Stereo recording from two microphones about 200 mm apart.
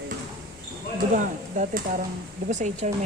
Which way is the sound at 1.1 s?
40° right (ahead or behind).